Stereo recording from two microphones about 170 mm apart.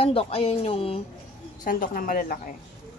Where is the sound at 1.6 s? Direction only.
55° left (ahead or behind).